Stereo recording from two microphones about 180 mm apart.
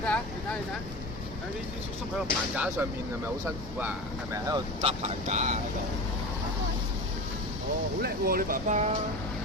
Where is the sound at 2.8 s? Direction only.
10° right (ahead or behind).